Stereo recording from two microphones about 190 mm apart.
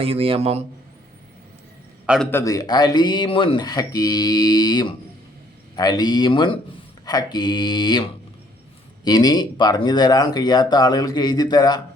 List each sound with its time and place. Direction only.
0.0 s a man's voice: 30° right (ahead or behind)
2.3 s speech: 20° left (ahead or behind)
9.0 s speech: 20° left (ahead or behind)